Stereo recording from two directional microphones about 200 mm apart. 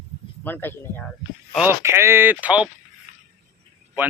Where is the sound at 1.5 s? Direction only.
10° right (ahead or behind).